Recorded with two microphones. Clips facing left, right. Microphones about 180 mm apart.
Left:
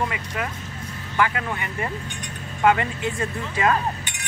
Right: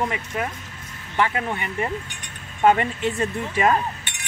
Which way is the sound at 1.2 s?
25° right (ahead or behind).